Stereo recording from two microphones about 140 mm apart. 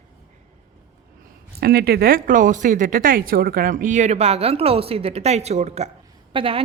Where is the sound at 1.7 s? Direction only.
90° right; by 5.9 s 50° right (ahead or behind).